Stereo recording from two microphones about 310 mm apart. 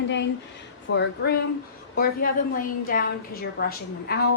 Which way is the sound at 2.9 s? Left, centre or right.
Left.